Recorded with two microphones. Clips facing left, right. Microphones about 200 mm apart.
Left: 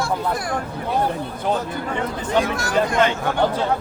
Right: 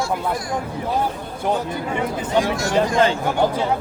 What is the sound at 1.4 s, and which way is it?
Speech, 10° right (ahead or behind).